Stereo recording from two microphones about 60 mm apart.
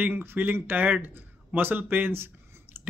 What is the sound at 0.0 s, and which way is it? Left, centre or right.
Speech, right.